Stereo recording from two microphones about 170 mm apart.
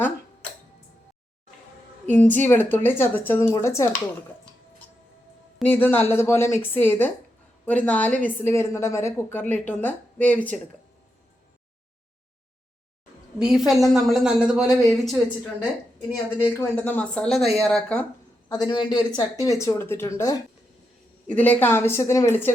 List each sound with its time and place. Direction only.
2.0 s a woman's voice: 10° left (ahead or behind)
5.6 s a woman's voice: 10° left (ahead or behind)
13.4 s speech: 5° right (ahead or behind)
16.5 s speech: 10° left (ahead or behind)
18.4 s speech: 25° left (ahead or behind)
21.2 s a woman's voice: 10° left (ahead or behind)